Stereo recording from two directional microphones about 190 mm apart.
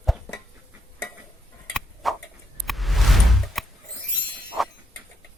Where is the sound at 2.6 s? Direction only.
Centre (ahead or behind).